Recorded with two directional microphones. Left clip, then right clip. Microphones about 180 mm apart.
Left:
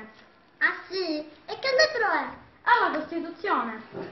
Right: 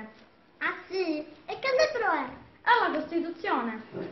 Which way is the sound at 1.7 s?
15° left (ahead or behind).